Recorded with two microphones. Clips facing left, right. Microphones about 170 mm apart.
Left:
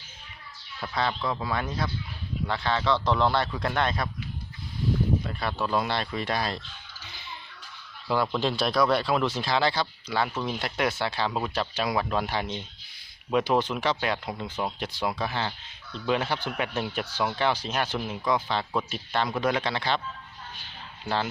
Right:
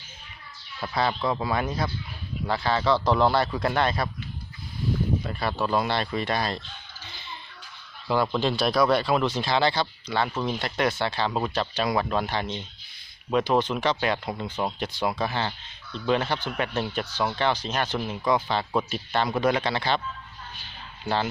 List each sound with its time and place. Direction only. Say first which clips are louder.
0.8 s speech: right 3 dB; 10° right (ahead or behind)
5.3 s speech: right 2 dB; 5° right (ahead or behind)
8.0 s speech: right 2 dB; centre (ahead or behind)